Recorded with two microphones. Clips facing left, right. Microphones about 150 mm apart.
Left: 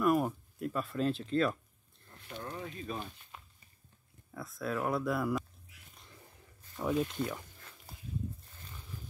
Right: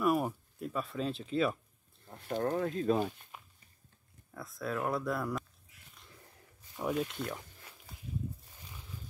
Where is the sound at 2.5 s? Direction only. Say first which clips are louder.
Right 10 dB; 90° right.